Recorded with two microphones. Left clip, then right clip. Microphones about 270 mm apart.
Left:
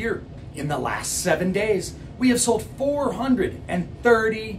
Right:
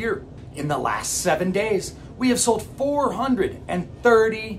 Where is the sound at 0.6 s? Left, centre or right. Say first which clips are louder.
Right 2 dB; centre.